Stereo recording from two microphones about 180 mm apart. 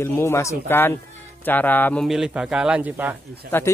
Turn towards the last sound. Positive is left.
turn(degrees=10)  # may be behind; listen again after turning